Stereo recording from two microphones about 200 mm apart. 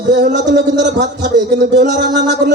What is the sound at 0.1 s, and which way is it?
A man's voice, 60° right (ahead or behind).